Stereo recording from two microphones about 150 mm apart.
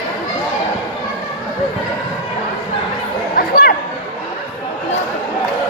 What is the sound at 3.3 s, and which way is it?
Chatter, 80° left.